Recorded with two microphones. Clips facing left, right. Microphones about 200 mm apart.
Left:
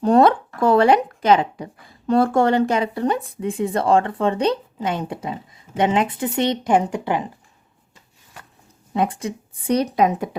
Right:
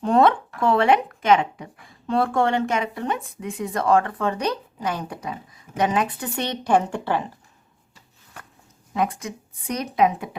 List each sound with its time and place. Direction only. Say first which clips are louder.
0.0 s speech: left 3 dB; 40° left (ahead or behind); by 7.3 s 15° left (ahead or behind)
8.9 s speech: left 3 dB; 30° left (ahead or behind)